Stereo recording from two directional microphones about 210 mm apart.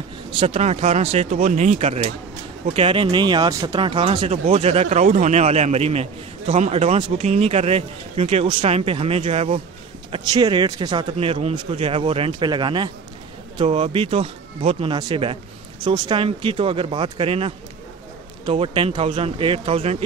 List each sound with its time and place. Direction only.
0.4 s speech: 30° right (ahead or behind)